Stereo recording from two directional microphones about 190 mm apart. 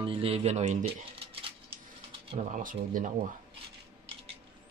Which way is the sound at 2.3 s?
40° right (ahead or behind).